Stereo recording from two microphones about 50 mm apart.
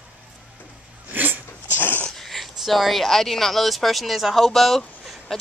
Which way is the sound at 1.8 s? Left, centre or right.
Left.